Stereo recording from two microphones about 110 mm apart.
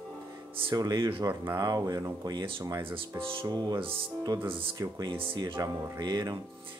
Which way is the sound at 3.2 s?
50° right (ahead or behind).